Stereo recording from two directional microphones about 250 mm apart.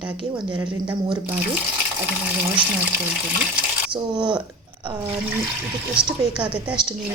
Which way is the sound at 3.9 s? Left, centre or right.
Centre.